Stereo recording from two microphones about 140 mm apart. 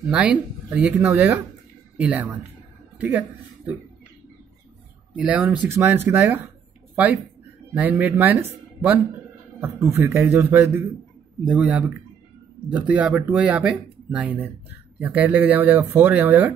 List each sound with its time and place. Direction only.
0.1 s speech: 5° right (ahead or behind)
0.9 s a woman's voice: 15° right (ahead or behind)
5.1 s speech: 10° right (ahead or behind)
7.7 s speech: 10° right (ahead or behind)
12.9 s speech: 10° right (ahead or behind)